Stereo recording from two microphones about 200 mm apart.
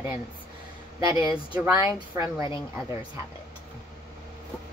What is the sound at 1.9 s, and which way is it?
Speech, 15° right (ahead or behind).